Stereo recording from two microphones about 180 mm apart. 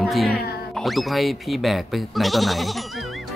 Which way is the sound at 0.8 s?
Centre (ahead or behind).